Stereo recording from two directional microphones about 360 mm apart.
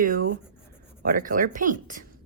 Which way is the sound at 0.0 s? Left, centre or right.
Right.